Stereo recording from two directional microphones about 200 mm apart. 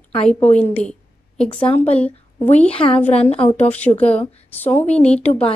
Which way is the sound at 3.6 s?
5° left (ahead or behind).